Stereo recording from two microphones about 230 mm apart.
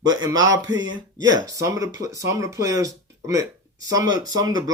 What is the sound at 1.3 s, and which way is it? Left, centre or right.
Speech, centre.